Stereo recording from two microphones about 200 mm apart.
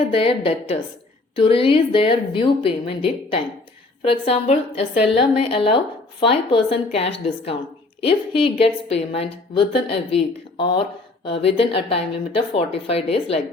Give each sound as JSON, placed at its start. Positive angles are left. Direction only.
{"t": 0.1, "sound": "a woman's voice", "side_deg": 25}